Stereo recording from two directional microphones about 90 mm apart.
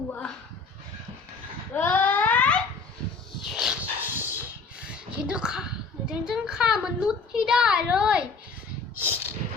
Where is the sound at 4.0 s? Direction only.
25° right (ahead or behind).